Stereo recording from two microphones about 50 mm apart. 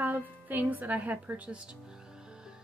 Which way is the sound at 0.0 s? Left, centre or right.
Right.